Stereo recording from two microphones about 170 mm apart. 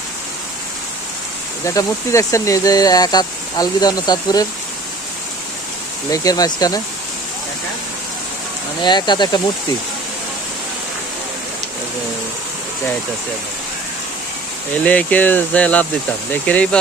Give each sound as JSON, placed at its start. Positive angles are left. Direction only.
{"t": 1.6, "sound": "speech", "side_deg": 20}
{"t": 6.1, "sound": "speech", "side_deg": 20}
{"t": 8.8, "sound": "speech", "side_deg": 25}
{"t": 14.8, "sound": "speech", "side_deg": 10}